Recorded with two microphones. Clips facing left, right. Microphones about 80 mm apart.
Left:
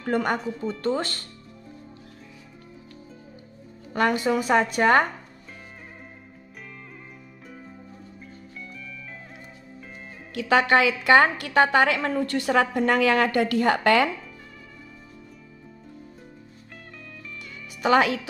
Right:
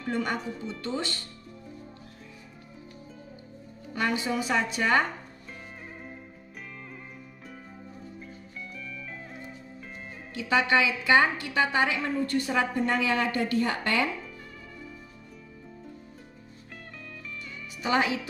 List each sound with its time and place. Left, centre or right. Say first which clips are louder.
0.0 s a woman's voice: left 5 dB; left
3.9 s a woman's voice: left 6 dB; left
10.3 s a woman's voice: left 5 dB; left
17.8 s a woman's voice: left 6 dB; left